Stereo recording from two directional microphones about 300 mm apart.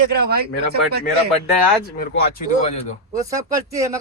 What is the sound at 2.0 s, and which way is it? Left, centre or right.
Speech, left.